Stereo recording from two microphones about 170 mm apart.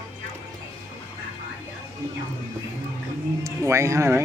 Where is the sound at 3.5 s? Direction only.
15° right (ahead or behind).